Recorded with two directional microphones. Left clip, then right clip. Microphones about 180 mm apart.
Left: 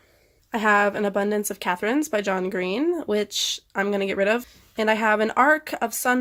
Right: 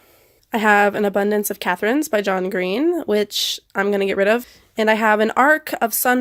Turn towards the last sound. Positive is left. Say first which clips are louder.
# right 5 dB
turn(degrees=-40)  # may be behind; listen again after turning